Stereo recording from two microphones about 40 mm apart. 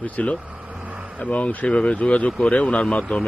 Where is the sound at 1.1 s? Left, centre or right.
Left.